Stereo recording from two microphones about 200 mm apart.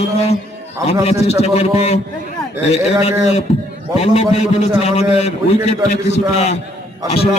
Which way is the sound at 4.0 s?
30° left (ahead or behind).